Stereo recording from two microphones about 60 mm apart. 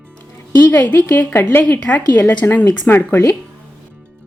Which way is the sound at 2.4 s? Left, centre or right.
Left.